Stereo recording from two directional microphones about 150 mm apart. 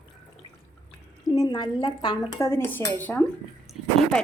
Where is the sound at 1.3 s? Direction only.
25° left (ahead or behind).